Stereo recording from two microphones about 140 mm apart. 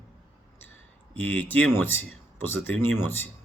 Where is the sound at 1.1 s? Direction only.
10° left (ahead or behind).